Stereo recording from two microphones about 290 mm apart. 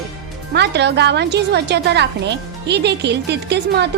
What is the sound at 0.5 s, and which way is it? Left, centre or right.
Speech, right.